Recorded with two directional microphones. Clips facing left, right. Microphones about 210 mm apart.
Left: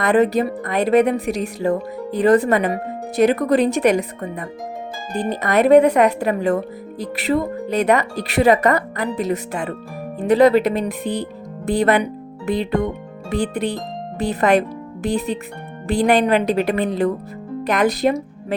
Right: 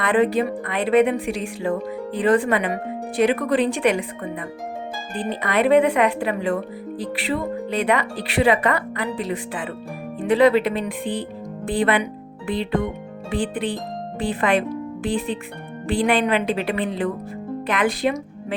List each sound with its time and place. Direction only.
0.0 s a woman's voice: 40° left (ahead or behind)